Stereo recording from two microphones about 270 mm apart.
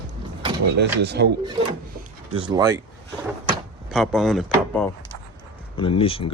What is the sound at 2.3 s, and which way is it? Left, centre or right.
Speech, centre.